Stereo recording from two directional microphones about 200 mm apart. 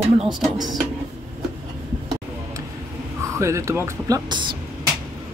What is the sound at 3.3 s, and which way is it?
Speech, 15° right (ahead or behind).